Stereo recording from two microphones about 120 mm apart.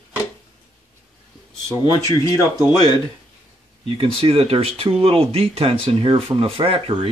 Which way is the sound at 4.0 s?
50° right (ahead or behind).